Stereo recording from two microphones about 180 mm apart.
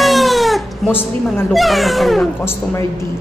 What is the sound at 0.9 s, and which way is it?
Speech, 10° left (ahead or behind).